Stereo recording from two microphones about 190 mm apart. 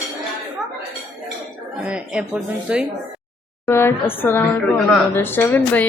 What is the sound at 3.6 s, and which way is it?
Speech, 10° left (ahead or behind).